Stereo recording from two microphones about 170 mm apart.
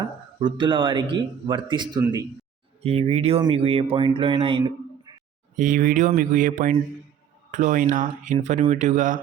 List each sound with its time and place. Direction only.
0.4 s speech: 30° right (ahead or behind)
2.8 s speech: 35° right (ahead or behind)
5.5 s speech: 50° right (ahead or behind)